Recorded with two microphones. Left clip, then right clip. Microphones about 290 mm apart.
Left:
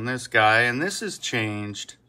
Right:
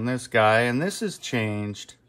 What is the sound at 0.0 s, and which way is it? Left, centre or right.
Speech, right.